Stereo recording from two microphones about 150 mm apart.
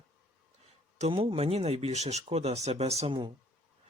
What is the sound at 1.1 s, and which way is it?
Speech, 35° right (ahead or behind).